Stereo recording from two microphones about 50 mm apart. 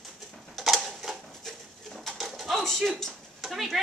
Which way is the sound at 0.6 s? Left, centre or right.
Centre.